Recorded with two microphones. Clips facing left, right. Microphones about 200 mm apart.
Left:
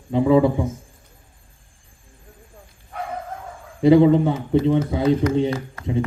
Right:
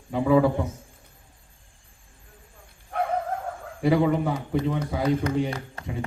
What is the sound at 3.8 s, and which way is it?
Speech, 25° left (ahead or behind).